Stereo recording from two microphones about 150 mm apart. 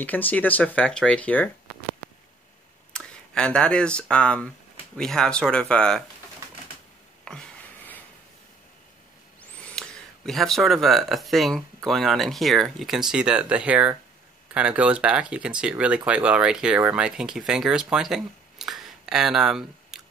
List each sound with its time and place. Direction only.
0.0 s speech: 10° left (ahead or behind)
2.9 s speech: 5° left (ahead or behind)
7.2 s a sound: 10° left (ahead or behind)
9.4 s speech: 5° left (ahead or behind)